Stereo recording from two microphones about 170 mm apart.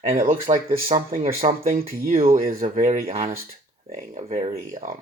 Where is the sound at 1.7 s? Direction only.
60° right (ahead or behind).